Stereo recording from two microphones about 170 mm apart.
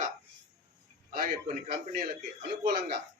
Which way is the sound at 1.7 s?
65° right (ahead or behind).